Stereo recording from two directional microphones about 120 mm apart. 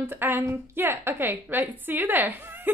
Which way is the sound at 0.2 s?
20° right (ahead or behind).